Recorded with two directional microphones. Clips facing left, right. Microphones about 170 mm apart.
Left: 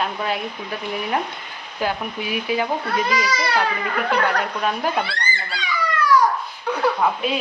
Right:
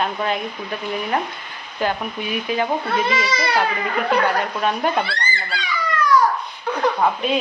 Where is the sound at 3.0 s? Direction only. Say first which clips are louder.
Even; 25° right (ahead or behind).